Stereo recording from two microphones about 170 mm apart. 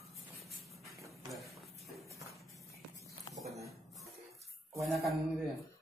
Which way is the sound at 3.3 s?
Centre (ahead or behind).